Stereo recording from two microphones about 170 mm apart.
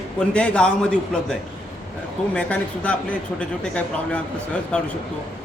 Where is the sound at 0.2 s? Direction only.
5° left (ahead or behind).